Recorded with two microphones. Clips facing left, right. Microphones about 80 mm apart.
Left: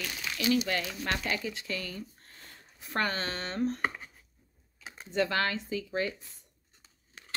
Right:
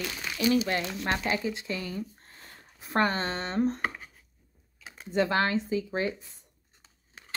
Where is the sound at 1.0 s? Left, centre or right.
Right.